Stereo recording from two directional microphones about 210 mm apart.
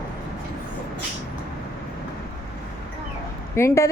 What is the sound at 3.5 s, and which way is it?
Speech, 15° left (ahead or behind).